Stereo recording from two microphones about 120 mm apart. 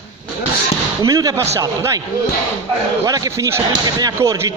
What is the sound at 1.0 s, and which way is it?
Speech, 30° right (ahead or behind).